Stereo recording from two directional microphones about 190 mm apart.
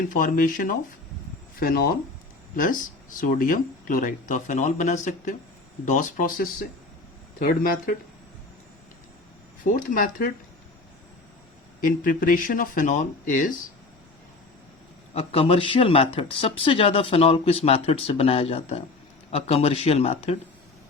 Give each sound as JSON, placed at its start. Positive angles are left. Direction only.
{"t": 0.1, "sound": "speech", "side_deg": 45}
{"t": 9.6, "sound": "speech", "side_deg": 45}
{"t": 11.8, "sound": "speech", "side_deg": 45}
{"t": 15.1, "sound": "speech", "side_deg": 30}